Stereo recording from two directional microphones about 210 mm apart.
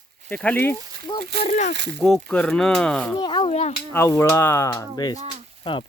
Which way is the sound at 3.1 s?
20° left (ahead or behind).